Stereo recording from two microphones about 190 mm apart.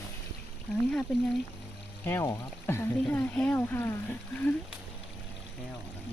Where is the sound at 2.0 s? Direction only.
15° left (ahead or behind).